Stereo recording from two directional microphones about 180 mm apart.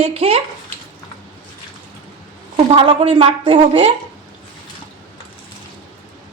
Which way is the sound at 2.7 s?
30° right (ahead or behind).